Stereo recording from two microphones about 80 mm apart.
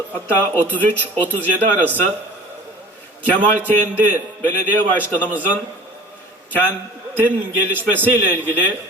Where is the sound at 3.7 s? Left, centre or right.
Left.